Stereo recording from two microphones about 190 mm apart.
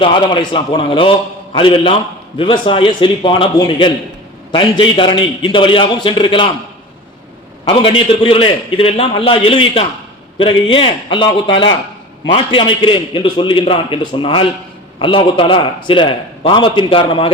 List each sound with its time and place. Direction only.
0.0 s a man's voice: 25° left (ahead or behind)
7.6 s a man's voice: 25° left (ahead or behind)